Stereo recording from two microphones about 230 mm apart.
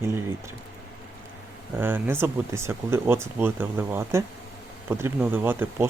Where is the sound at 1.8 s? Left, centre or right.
Centre.